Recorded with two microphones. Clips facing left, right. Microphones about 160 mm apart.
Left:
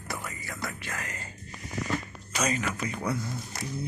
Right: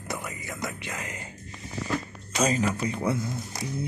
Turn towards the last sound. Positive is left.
turn(degrees=-20)  # may be behind; listen again after turning